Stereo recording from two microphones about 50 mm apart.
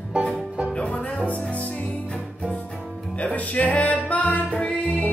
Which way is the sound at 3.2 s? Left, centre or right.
Left.